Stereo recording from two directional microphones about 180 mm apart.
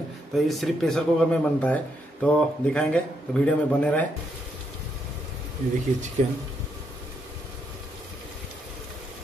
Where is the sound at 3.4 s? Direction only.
5° left (ahead or behind).